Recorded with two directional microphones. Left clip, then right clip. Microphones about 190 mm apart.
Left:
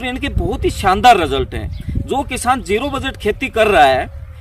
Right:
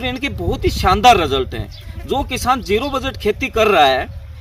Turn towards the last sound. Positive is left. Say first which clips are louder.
# left 2 dB
turn(degrees=5)  # may be behind; listen again after turning